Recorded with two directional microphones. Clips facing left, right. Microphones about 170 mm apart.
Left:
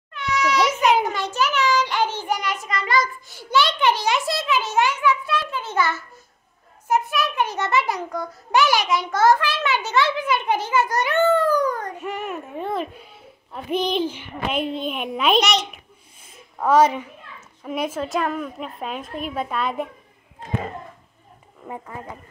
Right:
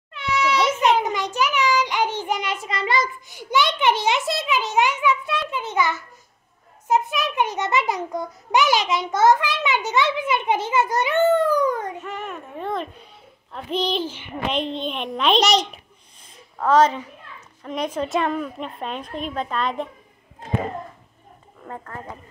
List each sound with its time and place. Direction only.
0.1 s a sound: 25° right (ahead or behind)
1.0 s child singing: 15° right (ahead or behind)
3.3 s a child's voice: 15° right (ahead or behind)
12.0 s a child's voice: 10° left (ahead or behind)
16.5 s a child's voice: 10° left (ahead or behind)
21.6 s a child's voice: 10° left (ahead or behind)